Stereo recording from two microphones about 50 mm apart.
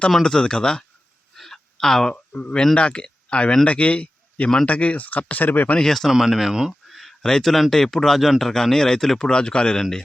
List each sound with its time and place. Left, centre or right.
0.2 s speech: centre
1.4 s a sound: centre
2.1 s speech: left
5.8 s speech: centre
6.1 s speech: centre
7.2 s speech: centre